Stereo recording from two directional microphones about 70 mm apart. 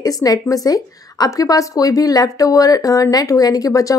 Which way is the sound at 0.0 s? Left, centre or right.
Left.